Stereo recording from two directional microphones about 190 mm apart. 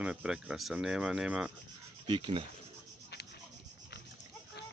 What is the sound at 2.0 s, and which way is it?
Speech, 25° right (ahead or behind).